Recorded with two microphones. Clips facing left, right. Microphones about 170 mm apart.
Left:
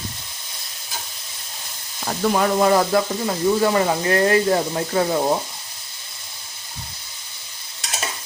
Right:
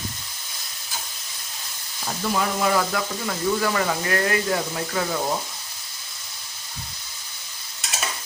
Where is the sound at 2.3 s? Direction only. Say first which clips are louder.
Left 5 dB; 40° left (ahead or behind).